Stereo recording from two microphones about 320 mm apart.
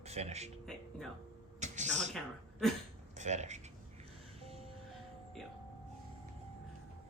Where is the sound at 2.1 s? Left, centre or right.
Centre.